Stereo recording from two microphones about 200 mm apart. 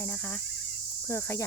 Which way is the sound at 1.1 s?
15° left (ahead or behind).